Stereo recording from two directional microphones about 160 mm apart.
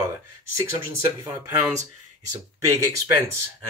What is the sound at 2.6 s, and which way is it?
Speech, 20° right (ahead or behind).